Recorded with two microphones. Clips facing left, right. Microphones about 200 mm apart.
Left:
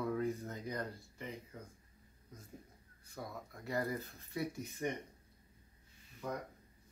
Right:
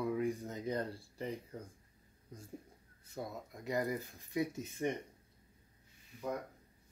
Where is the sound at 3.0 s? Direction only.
25° right (ahead or behind).